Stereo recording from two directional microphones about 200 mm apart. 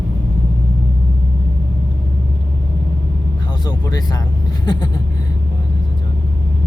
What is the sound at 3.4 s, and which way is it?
Speech, 20° left (ahead or behind).